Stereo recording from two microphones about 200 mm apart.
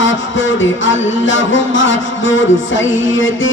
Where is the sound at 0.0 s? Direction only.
70° left (ahead or behind).